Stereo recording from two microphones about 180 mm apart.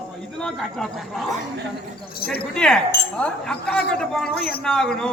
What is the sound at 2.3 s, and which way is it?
Speech, 5° left (ahead or behind).